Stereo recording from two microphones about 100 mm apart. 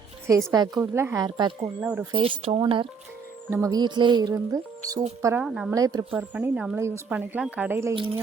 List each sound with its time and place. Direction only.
0.5 s speech: 40° right (ahead or behind)
0.8 s speech: 25° right (ahead or behind)
1.2 s speech: 45° right (ahead or behind)
1.8 s speech: 15° right (ahead or behind)
2.1 s speech: 60° right (ahead or behind)
2.6 s speech: 55° right (ahead or behind)
3.5 s speech: 35° right (ahead or behind)
5.4 s speech: 5° right (ahead or behind)
5.7 s speech: 35° right (ahead or behind)
6.1 s speech: 20° right (ahead or behind)
6.7 s speech: 30° right (ahead or behind)
7.1 s speech: 15° right (ahead or behind)
7.9 s speech: 60° right (ahead or behind)